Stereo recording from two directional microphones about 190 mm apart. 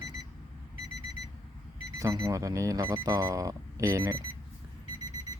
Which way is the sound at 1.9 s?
20° right (ahead or behind).